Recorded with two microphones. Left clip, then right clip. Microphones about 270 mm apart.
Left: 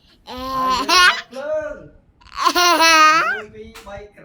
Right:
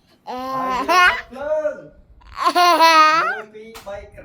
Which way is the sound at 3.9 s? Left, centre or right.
Right.